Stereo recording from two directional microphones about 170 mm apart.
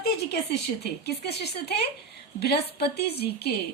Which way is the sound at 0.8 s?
75° left (ahead or behind).